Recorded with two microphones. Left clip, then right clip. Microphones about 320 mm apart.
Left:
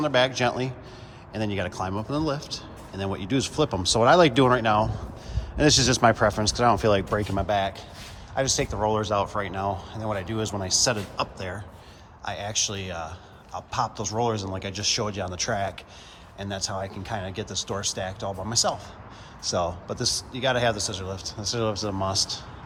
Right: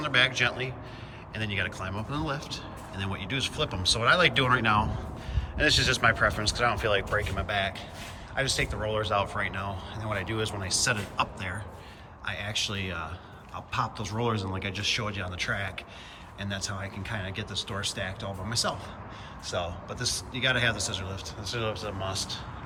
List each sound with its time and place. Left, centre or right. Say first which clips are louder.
0.0 s speech: left 2 dB; centre